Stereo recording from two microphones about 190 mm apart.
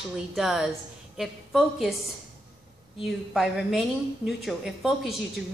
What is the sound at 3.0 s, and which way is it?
A woman's voice, centre (ahead or behind).